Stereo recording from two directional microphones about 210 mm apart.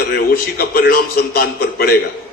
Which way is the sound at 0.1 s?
45° left (ahead or behind).